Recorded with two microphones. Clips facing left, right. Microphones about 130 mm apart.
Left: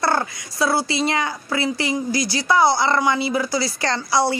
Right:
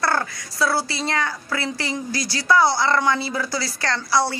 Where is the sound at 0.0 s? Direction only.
20° left (ahead or behind).